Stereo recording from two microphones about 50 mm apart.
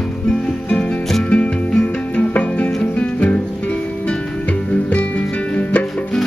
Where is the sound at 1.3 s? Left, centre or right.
Left.